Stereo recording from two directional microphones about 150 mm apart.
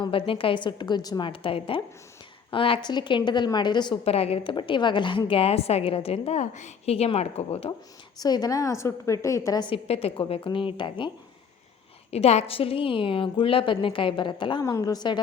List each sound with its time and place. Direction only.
0.0 s a woman's voice: 35° left (ahead or behind)
4.0 s a woman's voice: 40° left (ahead or behind)
8.2 s a woman's voice: 25° left (ahead or behind)
12.1 s a woman's voice: 45° left (ahead or behind); by 15.2 s 30° left (ahead or behind)